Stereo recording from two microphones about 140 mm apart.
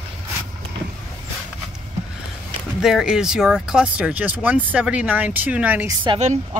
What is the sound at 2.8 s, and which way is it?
Speech, 5° right (ahead or behind).